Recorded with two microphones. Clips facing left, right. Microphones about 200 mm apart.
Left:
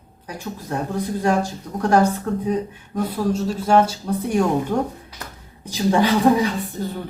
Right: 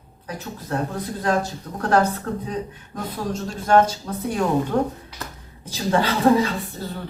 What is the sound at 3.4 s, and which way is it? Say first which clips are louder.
Speech: right 1 dB; 10° left (ahead or behind).